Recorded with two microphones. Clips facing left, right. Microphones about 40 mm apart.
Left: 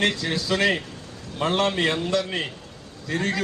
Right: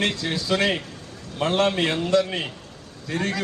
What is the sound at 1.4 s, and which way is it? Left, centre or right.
Speech, centre.